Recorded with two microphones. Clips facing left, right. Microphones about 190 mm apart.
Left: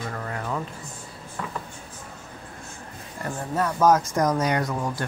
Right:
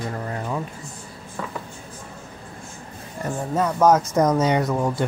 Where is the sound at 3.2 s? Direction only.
20° right (ahead or behind).